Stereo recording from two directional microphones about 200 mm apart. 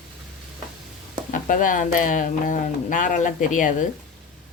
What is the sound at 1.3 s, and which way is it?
Speech, 40° left (ahead or behind).